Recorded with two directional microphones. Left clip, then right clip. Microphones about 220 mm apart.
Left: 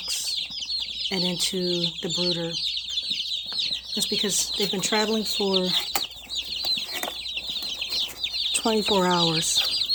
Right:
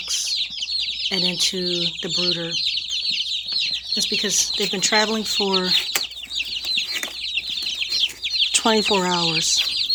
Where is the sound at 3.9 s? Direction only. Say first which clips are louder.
Right 4 dB; 5° left (ahead or behind).